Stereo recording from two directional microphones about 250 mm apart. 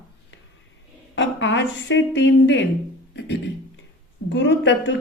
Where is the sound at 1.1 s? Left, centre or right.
Left.